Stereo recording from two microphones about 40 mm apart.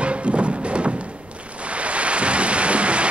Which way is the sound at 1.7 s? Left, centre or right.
Right.